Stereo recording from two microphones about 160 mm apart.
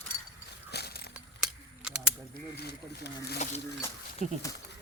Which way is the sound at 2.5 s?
90° left.